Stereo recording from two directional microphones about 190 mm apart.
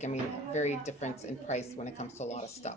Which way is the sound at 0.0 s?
40° left (ahead or behind).